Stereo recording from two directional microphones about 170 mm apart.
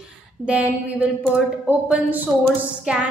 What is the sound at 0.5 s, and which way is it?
A woman's voice, 5° right (ahead or behind).